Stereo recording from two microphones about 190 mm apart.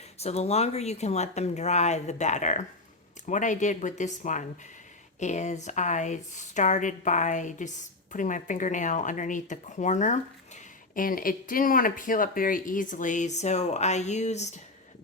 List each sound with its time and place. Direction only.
0.2 s speech: 35° left (ahead or behind)